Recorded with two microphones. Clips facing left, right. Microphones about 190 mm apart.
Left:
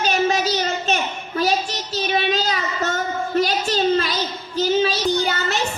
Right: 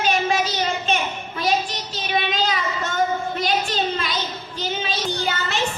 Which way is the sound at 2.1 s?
40° left (ahead or behind).